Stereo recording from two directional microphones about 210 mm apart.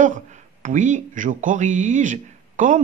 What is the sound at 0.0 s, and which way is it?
Speech, 40° right (ahead or behind).